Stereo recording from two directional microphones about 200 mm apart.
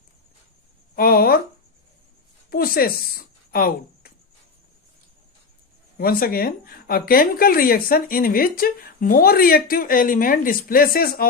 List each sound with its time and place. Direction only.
0.9 s speech: 45° left (ahead or behind)
2.5 s speech: 50° left (ahead or behind)
6.0 s speech: 50° left (ahead or behind)